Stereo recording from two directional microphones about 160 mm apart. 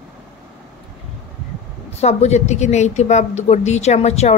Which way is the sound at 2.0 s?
45° left (ahead or behind).